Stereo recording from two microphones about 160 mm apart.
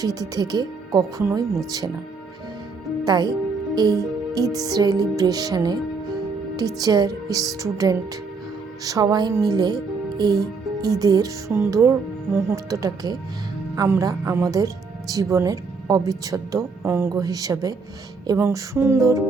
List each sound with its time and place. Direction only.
0.0 s speech: 25° right (ahead or behind)
3.0 s a woman's voice: 25° right (ahead or behind)